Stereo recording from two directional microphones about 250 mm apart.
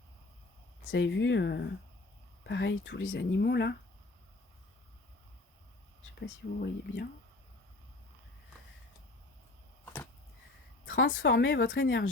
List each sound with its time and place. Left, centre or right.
0.9 s speech: left
6.1 s speech: left
9.8 s arrow: centre
10.8 s speech: left